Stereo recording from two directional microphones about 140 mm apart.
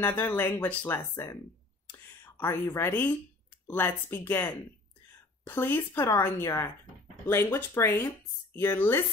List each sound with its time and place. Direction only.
0.0 s speech: 15° left (ahead or behind)
1.9 s a sound: 15° left (ahead or behind)
3.6 s speech: 15° left (ahead or behind)